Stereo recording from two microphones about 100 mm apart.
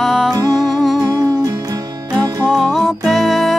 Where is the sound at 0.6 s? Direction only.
Centre (ahead or behind).